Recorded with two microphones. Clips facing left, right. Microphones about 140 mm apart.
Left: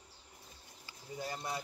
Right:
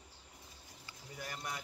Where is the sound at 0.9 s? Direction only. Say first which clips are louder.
Left 5 dB; 25° left (ahead or behind).